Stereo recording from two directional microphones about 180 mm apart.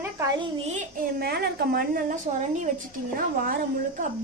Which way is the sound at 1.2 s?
60° right (ahead or behind).